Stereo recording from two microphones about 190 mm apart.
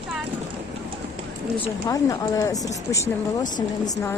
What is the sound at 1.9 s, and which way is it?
Speech, 20° left (ahead or behind).